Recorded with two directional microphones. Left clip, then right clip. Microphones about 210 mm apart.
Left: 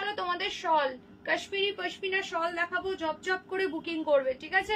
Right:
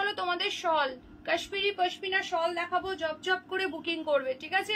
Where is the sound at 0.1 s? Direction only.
5° right (ahead or behind).